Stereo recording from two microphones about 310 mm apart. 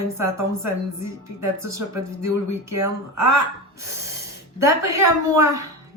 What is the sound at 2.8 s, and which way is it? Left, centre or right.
Speech, right.